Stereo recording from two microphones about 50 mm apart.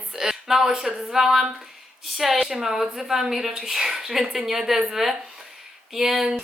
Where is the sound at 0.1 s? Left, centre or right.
Centre.